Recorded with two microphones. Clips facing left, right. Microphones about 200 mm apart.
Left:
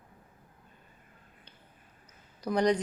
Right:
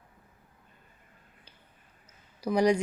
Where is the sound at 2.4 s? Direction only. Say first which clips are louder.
Right 2 dB; 10° right (ahead or behind).